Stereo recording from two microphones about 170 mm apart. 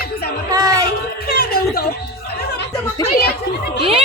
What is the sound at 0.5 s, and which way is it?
Speech, 20° right (ahead or behind).